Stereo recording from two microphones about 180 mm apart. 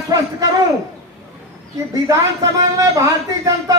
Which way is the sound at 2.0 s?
20° right (ahead or behind).